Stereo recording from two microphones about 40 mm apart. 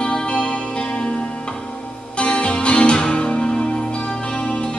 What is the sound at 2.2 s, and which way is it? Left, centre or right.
Music, left.